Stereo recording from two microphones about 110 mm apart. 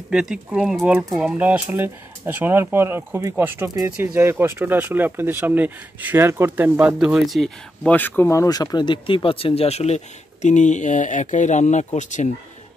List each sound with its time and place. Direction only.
0.1 s speech: 5° right (ahead or behind)
7.0 s speech: 5° right (ahead or behind)
7.9 s speech: 15° left (ahead or behind)
8.3 s speech: 30° left (ahead or behind); by 12.3 s 90° left